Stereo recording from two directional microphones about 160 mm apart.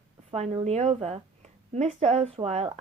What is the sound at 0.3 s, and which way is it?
A woman's voice, 35° right (ahead or behind).